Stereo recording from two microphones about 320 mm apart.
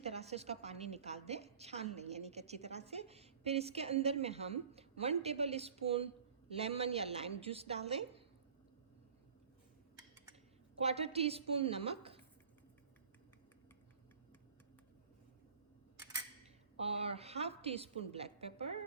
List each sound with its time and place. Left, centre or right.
0.0 s a woman's voice: centre
10.8 s a woman's voice: centre
17.1 s a woman's voice: centre